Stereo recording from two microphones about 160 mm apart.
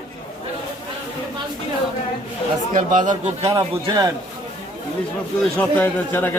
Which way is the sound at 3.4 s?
20° right (ahead or behind).